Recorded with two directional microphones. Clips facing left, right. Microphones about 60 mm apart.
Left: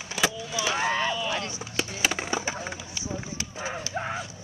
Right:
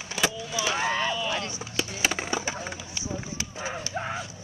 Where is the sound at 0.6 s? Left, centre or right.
Left.